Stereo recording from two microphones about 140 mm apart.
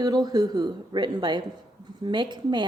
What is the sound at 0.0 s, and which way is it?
Speech, 30° right (ahead or behind).